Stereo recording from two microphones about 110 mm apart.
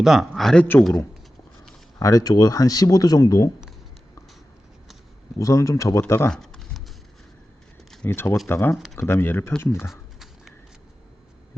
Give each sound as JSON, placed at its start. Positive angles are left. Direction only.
{"t": 0.0, "sound": "a man's voice", "side_deg": -5}
{"t": 0.6, "sound": "speech", "side_deg": 20}
{"t": 2.0, "sound": "speech", "side_deg": 30}
{"t": 5.4, "sound": "speech", "side_deg": 30}
{"t": 6.3, "sound": "a sound", "side_deg": 5}
{"t": 8.0, "sound": "speech", "side_deg": 20}
{"t": 8.7, "sound": "a man's voice", "side_deg": 0}
{"t": 9.0, "sound": "speech", "side_deg": 20}
{"t": 9.9, "sound": "a sound", "side_deg": -5}